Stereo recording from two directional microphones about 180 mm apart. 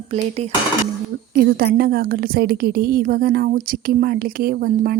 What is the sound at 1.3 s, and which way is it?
A woman's voice, 60° right (ahead or behind).